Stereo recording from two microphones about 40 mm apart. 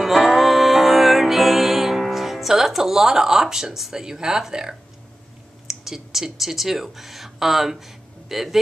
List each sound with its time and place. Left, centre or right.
0.0 s music: centre
4.0 s speech: centre